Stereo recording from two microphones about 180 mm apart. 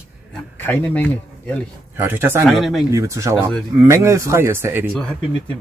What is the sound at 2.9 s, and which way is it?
Speech, 15° right (ahead or behind).